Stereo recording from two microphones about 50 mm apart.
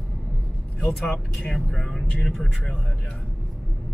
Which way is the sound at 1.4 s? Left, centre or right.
Centre.